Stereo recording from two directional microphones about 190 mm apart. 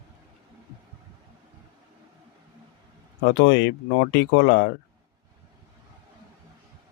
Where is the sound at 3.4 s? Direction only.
70° left (ahead or behind).